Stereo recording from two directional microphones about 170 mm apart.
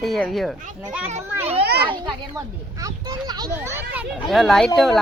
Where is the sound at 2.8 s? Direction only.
25° right (ahead or behind).